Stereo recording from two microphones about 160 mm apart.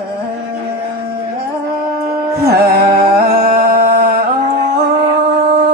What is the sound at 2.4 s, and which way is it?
Music, 75° right (ahead or behind).